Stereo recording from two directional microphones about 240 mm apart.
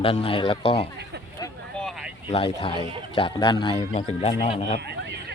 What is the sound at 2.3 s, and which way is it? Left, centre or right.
Speech, left.